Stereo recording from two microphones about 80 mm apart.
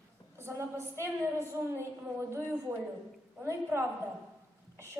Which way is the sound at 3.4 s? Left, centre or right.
Right.